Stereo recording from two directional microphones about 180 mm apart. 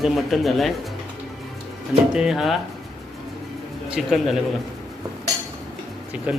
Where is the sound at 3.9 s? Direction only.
Centre (ahead or behind).